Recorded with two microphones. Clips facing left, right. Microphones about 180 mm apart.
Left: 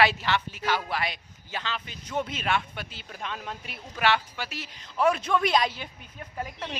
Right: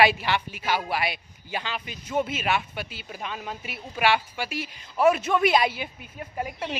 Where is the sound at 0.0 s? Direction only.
15° right (ahead or behind).